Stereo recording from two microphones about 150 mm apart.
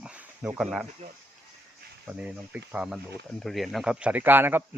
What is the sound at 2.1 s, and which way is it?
A man's voice, 10° right (ahead or behind).